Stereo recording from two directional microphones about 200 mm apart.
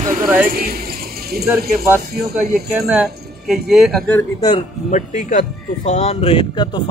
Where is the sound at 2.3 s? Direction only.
5° right (ahead or behind).